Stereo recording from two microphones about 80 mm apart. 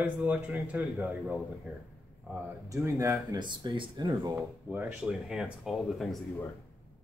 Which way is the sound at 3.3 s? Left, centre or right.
Right.